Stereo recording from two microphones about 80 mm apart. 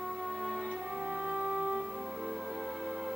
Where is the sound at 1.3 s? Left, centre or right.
Centre.